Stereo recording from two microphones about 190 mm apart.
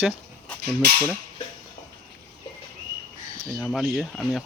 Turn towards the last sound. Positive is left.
turn(degrees=0)  # may be behind; listen again after turning